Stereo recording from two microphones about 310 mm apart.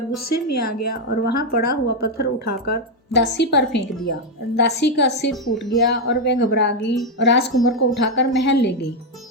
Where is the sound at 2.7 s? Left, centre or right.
Left.